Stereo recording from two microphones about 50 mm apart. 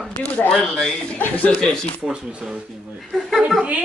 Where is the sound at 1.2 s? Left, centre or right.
Left.